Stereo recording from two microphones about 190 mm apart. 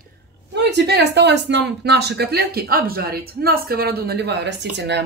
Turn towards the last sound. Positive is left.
turn(degrees=-65)  # may be behind; listen again after turning